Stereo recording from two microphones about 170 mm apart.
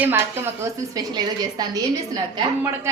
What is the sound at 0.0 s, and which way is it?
A woman's voice, 15° right (ahead or behind).